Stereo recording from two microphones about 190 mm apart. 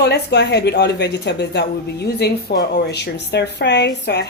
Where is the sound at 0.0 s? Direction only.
60° left (ahead or behind).